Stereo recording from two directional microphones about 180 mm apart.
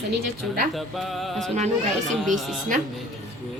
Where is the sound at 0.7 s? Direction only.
Centre (ahead or behind).